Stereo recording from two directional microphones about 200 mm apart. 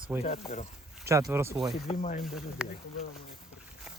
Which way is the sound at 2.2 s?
5° right (ahead or behind).